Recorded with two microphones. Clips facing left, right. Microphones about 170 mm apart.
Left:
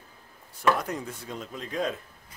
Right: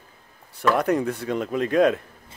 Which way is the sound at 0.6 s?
70° right (ahead or behind).